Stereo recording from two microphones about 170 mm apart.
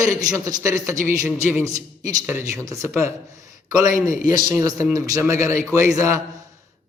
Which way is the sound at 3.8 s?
45° left (ahead or behind).